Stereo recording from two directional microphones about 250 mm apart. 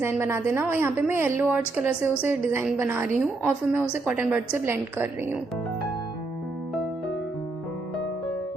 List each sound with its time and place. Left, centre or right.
0.0 s a woman's voice: centre